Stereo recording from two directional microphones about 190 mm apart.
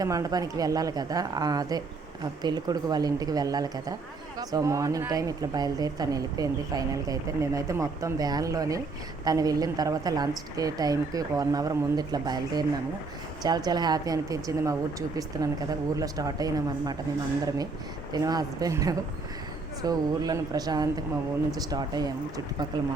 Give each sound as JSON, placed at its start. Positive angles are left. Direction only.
{"t": 0.0, "sound": "a woman's voice", "side_deg": -20}
{"t": 18.1, "sound": "a woman's voice", "side_deg": -20}